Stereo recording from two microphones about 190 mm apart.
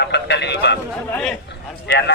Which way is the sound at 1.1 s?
5° left (ahead or behind).